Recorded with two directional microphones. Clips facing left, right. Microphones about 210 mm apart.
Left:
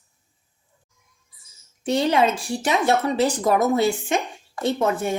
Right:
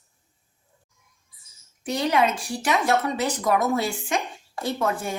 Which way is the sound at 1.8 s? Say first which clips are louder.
Left 3 dB; 25° left (ahead or behind).